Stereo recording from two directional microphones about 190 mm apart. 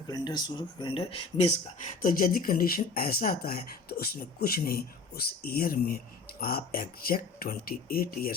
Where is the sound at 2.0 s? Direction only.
50° left (ahead or behind).